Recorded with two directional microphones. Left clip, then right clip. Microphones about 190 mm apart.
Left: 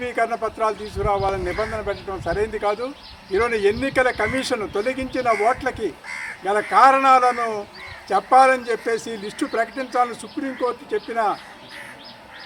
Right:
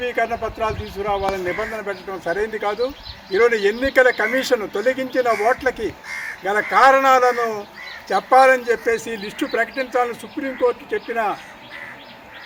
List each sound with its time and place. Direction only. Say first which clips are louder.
0.0 s speech: right 1 dB; 20° right (ahead or behind)